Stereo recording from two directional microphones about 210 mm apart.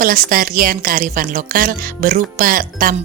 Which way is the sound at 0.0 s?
40° right (ahead or behind).